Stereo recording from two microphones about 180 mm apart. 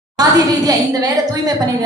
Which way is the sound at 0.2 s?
20° right (ahead or behind).